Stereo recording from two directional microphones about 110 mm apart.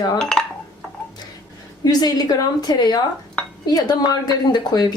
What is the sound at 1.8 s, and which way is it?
A woman's voice, 40° left (ahead or behind).